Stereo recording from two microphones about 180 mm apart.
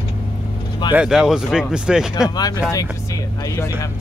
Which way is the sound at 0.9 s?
5° right (ahead or behind).